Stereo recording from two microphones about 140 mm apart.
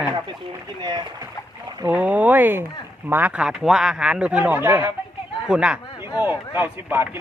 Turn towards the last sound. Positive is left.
turn(degrees=-15)  # may be behind; listen again after turning